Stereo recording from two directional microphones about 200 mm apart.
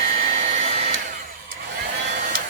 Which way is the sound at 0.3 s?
35° right (ahead or behind).